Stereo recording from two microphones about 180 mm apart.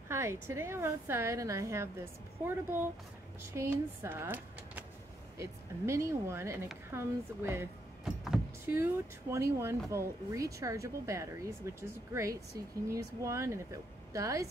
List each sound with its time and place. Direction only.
0.1 s a woman's voice: 15° right (ahead or behind)
8.0 s a sound: centre (ahead or behind)
8.7 s a woman's voice: 15° right (ahead or behind)